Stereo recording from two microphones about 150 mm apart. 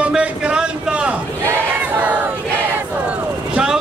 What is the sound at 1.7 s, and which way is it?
Battle cry, 10° right (ahead or behind).